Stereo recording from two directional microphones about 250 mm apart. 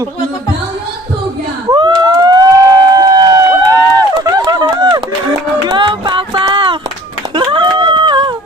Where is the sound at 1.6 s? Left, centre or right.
Centre.